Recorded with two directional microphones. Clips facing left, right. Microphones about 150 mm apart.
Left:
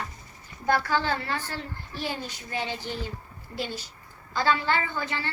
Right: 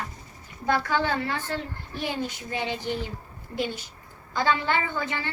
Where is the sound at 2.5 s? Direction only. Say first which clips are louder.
Right 2 dB; 20° right (ahead or behind).